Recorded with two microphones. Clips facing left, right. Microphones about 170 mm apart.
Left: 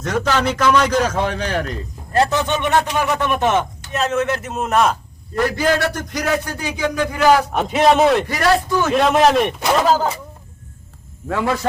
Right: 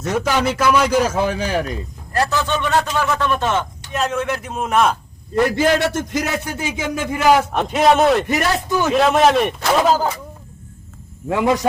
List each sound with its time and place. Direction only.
0.0 s a man's voice: 10° right (ahead or behind)
2.1 s a man's voice: 20° left (ahead or behind)
3.9 s a man's voice: 5° left (ahead or behind)
5.3 s a man's voice: 20° right (ahead or behind)
7.5 s a man's voice: centre (ahead or behind)
8.3 s a man's voice: 20° right (ahead or behind)
8.9 s a man's voice: centre (ahead or behind)
11.3 s a man's voice: 15° right (ahead or behind)